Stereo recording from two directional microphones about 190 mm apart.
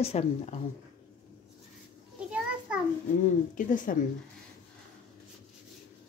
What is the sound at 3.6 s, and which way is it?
Speech, 45° left (ahead or behind).